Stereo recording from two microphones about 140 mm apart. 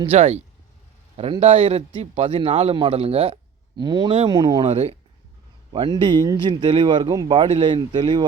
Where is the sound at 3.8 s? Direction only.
30° right (ahead or behind).